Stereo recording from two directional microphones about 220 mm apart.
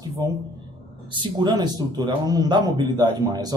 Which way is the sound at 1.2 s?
20° right (ahead or behind).